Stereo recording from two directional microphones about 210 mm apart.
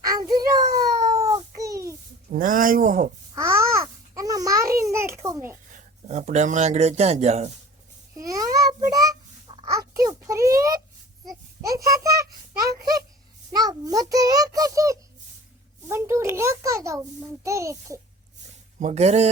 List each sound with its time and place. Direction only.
0.0 s a sound: 20° right (ahead or behind)
2.3 s speech: 40° right (ahead or behind)
3.3 s babbling: 15° right (ahead or behind)
5.7 s speech: 35° right (ahead or behind)
8.1 s babbling: 15° right (ahead or behind)
11.6 s a child's voice: 15° right (ahead or behind)
13.5 s a child's voice: 20° right (ahead or behind)
18.8 s speech: 35° right (ahead or behind)